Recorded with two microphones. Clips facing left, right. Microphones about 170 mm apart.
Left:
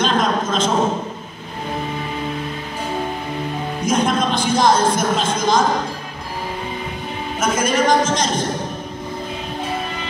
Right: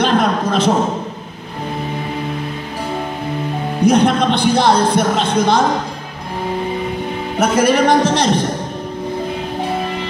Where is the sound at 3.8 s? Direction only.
65° right (ahead or behind).